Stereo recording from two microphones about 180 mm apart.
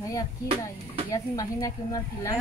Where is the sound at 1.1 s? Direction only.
20° left (ahead or behind).